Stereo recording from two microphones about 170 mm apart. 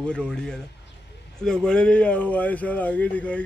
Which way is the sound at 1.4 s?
5° left (ahead or behind).